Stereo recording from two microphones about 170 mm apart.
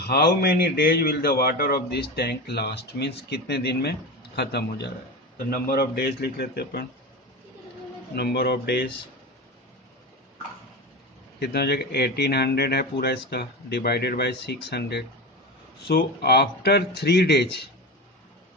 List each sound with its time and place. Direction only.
0.0 s a man's voice: 65° left (ahead or behind)
5.5 s a man's voice: 65° left (ahead or behind)
8.1 s a man's voice: 70° left (ahead or behind)
11.3 s a man's voice: 70° left (ahead or behind)